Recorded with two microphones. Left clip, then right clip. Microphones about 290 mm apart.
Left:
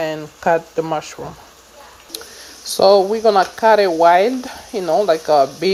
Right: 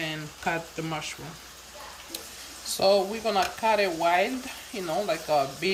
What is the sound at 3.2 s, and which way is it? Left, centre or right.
Speech, left.